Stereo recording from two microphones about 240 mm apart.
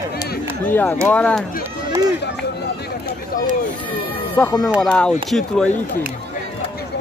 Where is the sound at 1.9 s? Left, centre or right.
Centre.